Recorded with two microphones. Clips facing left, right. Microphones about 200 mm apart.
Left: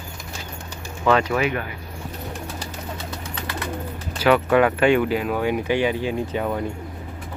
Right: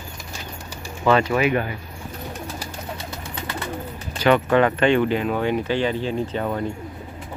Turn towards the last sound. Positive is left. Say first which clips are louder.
# even
turn(degrees=10)  # may be behind; listen again after turning